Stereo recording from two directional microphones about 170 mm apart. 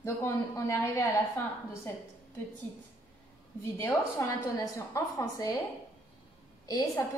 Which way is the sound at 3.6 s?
15° left (ahead or behind).